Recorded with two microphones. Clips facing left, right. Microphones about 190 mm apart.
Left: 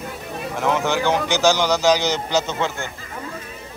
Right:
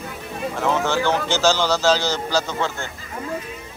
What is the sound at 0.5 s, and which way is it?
A man's voice, 15° left (ahead or behind).